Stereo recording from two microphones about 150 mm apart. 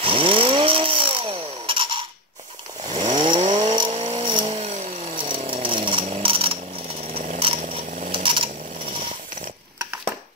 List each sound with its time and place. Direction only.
0.0 s rub: 35° right (ahead or behind)
2.8 s vehicle: 30° right (ahead or behind); by 5.2 s 45° right (ahead or behind)
5.2 s chainsaw: 35° right (ahead or behind)
7.2 s a sound: 40° right (ahead or behind)
7.7 s tools: 35° right (ahead or behind)